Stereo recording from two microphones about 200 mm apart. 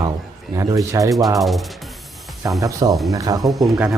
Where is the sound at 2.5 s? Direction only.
15° right (ahead or behind).